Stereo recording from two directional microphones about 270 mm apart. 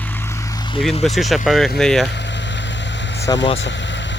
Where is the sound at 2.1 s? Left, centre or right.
Left.